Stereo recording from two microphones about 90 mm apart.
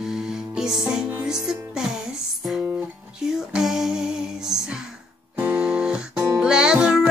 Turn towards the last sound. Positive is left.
turn(degrees=-10)  # may be behind; listen again after turning